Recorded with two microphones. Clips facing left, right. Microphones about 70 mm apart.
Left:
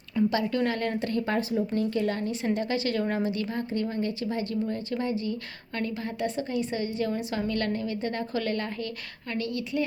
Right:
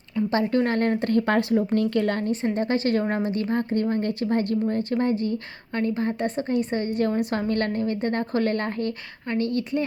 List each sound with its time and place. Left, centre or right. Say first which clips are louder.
0.3 s a woman's voice: right 8 dB; right
1.4 s a woman's voice: right 5 dB; right
5.7 s a woman's voice: right 7 dB; right